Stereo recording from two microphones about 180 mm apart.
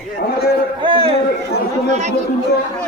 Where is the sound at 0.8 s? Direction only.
30° right (ahead or behind).